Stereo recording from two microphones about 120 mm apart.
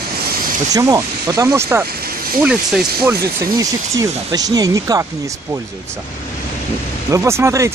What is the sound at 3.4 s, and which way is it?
Speech, 30° right (ahead or behind).